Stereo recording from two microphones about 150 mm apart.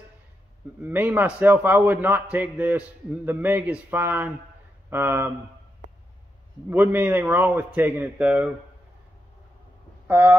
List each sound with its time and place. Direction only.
0.8 s a man's voice: 10° right (ahead or behind)
6.7 s a man's voice: 10° right (ahead or behind)
10.0 s speech: 15° right (ahead or behind)